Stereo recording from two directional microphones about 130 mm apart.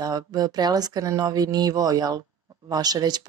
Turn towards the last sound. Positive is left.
turn(degrees=-30)  # may be behind; listen again after turning